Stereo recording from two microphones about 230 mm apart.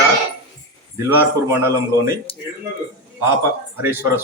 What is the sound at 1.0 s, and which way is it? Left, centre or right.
Speech, centre.